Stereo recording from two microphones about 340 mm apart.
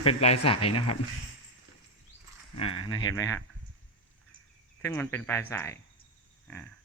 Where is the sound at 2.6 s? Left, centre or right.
Centre.